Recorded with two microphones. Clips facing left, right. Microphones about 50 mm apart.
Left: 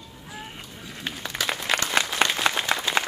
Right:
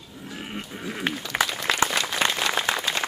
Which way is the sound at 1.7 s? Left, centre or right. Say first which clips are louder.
Even; left.